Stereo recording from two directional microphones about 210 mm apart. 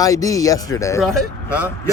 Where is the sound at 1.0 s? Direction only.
5° right (ahead or behind).